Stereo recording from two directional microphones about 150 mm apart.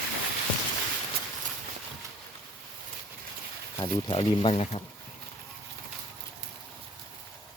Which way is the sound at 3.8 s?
35° left (ahead or behind).